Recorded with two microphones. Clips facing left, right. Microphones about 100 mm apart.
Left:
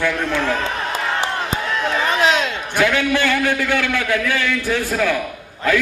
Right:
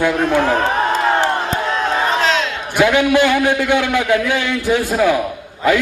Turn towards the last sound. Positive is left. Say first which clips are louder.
# right 3 dB
turn(degrees=-15)  # may be behind; listen again after turning